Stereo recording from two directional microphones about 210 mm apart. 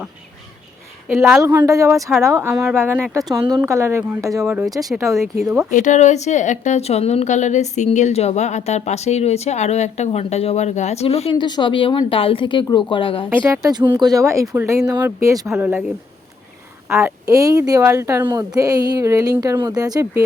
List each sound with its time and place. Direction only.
1.0 s a woman's voice: 5° right (ahead or behind)
4.4 s a woman's voice: centre (ahead or behind)
5.7 s a woman's voice: 35° left (ahead or behind)
13.3 s speech: 10° right (ahead or behind)
16.9 s speech: 10° right (ahead or behind)